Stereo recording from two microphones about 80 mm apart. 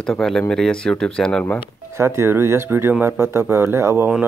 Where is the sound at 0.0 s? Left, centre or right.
Centre.